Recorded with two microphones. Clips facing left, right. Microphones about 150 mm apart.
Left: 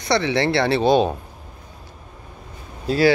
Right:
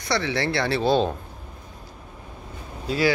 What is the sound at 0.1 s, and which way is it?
A man's voice, 20° left (ahead or behind).